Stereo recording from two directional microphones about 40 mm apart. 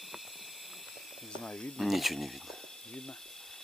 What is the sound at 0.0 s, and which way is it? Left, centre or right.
Snake, centre.